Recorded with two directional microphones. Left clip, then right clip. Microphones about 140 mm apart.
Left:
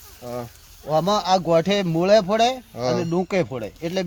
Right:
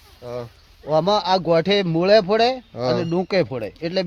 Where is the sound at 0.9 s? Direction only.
60° right (ahead or behind).